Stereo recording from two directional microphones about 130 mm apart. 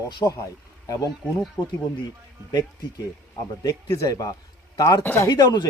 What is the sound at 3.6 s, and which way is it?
A man's voice, 25° left (ahead or behind).